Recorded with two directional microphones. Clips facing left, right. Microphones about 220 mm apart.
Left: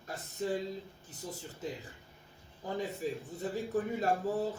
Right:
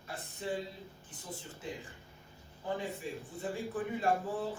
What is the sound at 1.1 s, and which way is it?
A man's voice, 40° left (ahead or behind).